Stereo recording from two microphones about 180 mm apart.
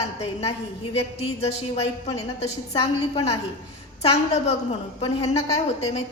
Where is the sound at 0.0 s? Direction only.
35° left (ahead or behind).